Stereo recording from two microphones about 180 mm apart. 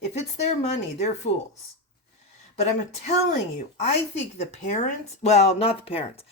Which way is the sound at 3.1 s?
40° left (ahead or behind).